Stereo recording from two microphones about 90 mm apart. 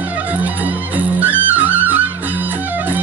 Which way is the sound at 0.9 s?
20° right (ahead or behind).